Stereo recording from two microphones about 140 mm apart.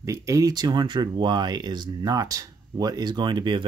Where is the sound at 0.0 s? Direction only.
25° right (ahead or behind).